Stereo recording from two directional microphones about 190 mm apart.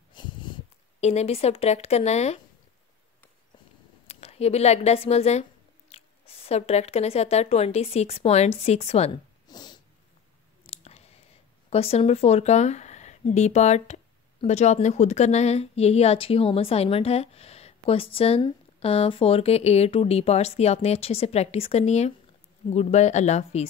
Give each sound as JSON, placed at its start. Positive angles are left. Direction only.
{"t": 0.1, "sound": "a sound", "side_deg": 25}
{"t": 1.0, "sound": "speech", "side_deg": 35}
{"t": 4.1, "sound": "speech", "side_deg": 30}
{"t": 9.5, "sound": "cat", "side_deg": 20}
{"t": 10.6, "sound": "clicking", "side_deg": 30}
{"t": 11.7, "sound": "speech", "side_deg": 30}